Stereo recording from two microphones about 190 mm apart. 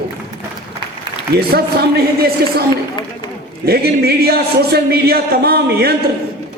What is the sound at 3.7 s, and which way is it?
A man's voice, 55° right (ahead or behind).